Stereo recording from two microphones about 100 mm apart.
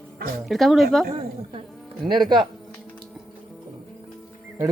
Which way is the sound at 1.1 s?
80° right.